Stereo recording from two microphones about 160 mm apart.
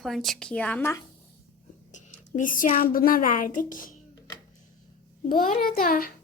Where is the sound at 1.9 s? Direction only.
55° left (ahead or behind).